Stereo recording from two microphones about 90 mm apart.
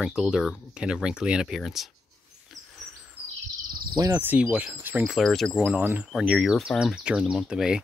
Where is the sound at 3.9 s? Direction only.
40° right (ahead or behind).